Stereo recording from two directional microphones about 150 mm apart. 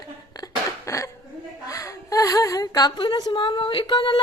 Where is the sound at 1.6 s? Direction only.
20° left (ahead or behind).